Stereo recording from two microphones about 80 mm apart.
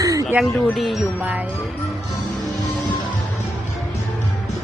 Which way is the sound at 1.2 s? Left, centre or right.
Centre.